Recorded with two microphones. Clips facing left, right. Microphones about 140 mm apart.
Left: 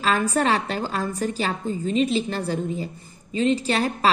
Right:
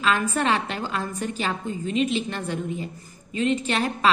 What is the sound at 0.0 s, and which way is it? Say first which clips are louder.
A woman's voice: left 2 dB; 35° left (ahead or behind).